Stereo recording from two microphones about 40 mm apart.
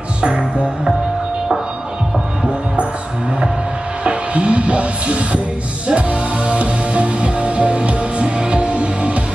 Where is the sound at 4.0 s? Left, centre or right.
Right.